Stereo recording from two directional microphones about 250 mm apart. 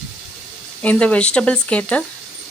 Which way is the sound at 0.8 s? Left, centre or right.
Centre.